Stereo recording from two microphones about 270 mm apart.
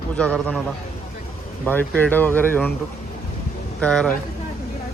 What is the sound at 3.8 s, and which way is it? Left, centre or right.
Speech, centre.